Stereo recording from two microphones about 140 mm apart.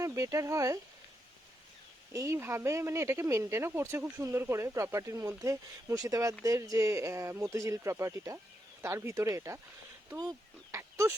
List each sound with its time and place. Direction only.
0.0 s speech: 25° right (ahead or behind)
2.1 s speech: 20° right (ahead or behind)